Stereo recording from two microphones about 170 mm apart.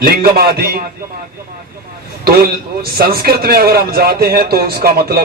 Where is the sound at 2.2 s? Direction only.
65° right (ahead or behind).